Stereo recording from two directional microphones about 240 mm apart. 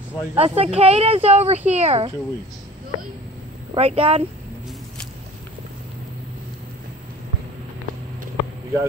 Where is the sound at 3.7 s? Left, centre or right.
Right.